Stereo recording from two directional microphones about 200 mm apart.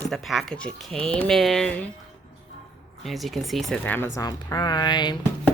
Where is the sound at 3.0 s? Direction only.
Centre (ahead or behind); by 5.2 s 20° left (ahead or behind).